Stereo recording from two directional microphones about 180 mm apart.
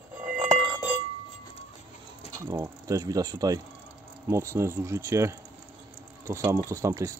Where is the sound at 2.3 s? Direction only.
20° right (ahead or behind).